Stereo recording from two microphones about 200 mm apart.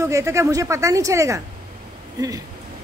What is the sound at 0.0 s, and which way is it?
A woman's voice, 15° right (ahead or behind).